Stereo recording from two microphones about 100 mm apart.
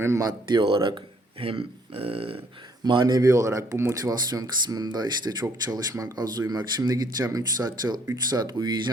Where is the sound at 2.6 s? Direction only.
50° right (ahead or behind).